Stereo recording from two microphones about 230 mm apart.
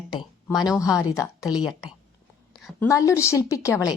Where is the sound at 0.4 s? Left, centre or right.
Centre.